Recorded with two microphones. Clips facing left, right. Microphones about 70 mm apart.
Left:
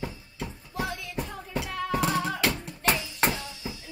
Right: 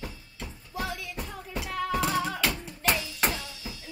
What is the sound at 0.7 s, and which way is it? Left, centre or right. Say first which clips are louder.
Music: left 1 dB; centre.